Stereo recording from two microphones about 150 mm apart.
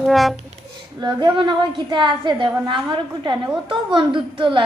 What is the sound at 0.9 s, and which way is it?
A woman's voice, 30° right (ahead or behind).